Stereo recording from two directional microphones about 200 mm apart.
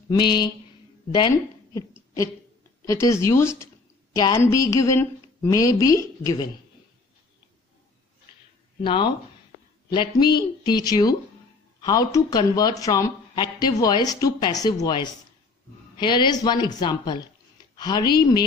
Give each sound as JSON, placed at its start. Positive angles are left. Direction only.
{"t": 0.1, "sound": "speech", "side_deg": 20}
{"t": 8.8, "sound": "speech", "side_deg": 25}